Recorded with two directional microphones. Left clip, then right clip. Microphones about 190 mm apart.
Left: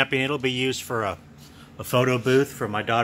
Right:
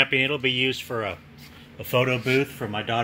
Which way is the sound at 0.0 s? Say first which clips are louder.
Right 2 dB; 10° left (ahead or behind).